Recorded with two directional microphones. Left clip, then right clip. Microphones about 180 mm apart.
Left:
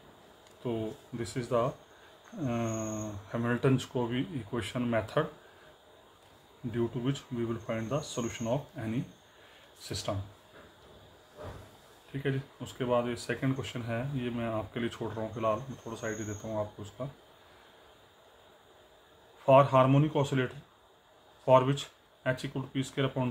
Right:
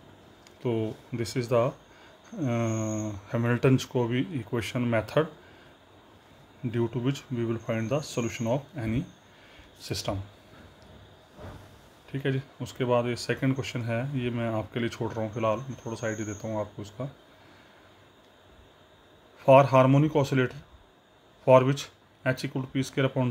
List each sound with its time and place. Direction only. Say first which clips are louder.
0.7 s speech: right 5 dB; 45° right (ahead or behind)
6.7 s speech: right 3 dB; 40° right (ahead or behind)
12.1 s speech: right 4 dB; 45° right (ahead or behind)
19.4 s speech: right 4 dB; 40° right (ahead or behind)